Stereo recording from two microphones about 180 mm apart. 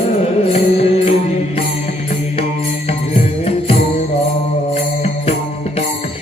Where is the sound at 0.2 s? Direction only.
35° left (ahead or behind).